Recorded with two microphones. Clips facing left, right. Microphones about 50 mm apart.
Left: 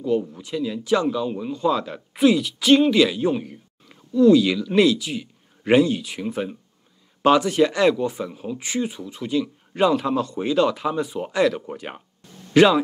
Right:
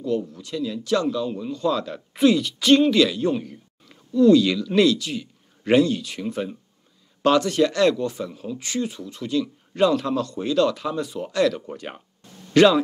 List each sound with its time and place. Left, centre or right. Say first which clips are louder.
0.0 s speech: left 2 dB; centre